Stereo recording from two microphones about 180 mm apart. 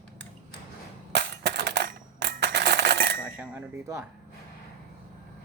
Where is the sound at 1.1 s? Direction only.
70° right (ahead or behind).